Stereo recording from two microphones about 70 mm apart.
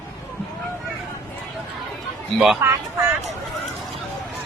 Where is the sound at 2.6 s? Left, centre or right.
Right.